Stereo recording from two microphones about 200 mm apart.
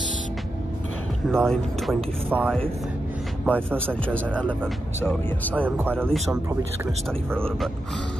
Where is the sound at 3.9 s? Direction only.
5° left (ahead or behind).